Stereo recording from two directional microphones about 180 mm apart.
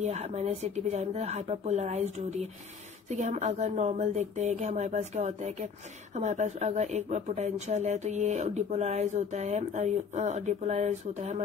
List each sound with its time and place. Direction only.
0.0 s speech: 40° right (ahead or behind)